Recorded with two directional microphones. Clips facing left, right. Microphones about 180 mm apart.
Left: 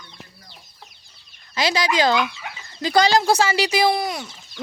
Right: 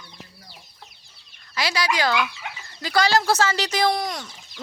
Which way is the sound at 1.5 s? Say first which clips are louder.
Left 4 dB; 20° left (ahead or behind).